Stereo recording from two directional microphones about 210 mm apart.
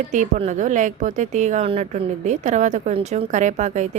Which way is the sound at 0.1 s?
35° right (ahead or behind).